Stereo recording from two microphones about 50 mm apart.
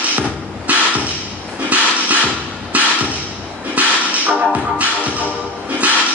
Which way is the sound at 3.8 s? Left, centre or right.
Right.